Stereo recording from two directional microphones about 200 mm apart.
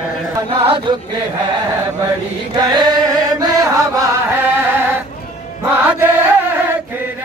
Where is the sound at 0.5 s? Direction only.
25° right (ahead or behind).